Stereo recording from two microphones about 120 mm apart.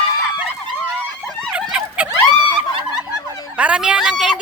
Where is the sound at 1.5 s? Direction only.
10° right (ahead or behind).